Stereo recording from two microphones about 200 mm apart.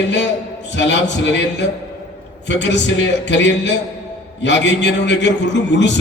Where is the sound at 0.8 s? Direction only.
60° left (ahead or behind).